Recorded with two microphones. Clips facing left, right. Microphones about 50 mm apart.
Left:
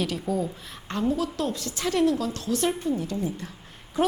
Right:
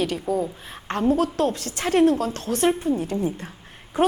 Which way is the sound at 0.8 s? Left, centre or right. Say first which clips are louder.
Right 5 dB; right.